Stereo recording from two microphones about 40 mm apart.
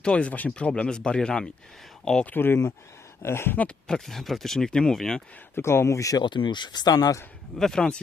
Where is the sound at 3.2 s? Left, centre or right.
Left.